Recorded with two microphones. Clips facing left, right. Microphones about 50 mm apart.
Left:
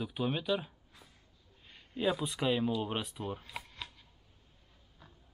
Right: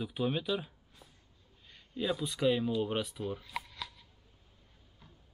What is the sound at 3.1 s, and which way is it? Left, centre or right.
Speech, left.